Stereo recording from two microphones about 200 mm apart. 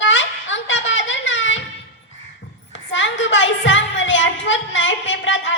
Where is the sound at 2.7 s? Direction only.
70° left (ahead or behind).